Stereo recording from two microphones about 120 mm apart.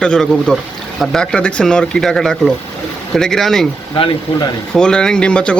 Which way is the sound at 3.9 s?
45° left (ahead or behind).